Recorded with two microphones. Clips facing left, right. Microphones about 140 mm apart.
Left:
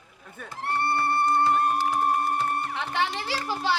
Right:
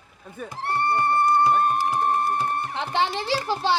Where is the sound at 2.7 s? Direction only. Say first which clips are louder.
Right 3 dB; 30° right (ahead or behind).